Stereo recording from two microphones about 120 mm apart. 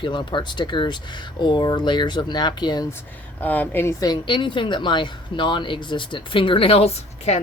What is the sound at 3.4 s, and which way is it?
Speech, 15° left (ahead or behind).